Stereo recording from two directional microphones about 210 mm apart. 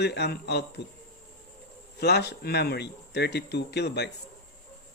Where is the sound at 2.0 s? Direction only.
50° left (ahead or behind).